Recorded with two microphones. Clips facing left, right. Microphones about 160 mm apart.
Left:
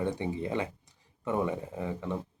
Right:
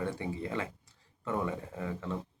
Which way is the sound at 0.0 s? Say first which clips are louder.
Left 4 dB; 20° left (ahead or behind).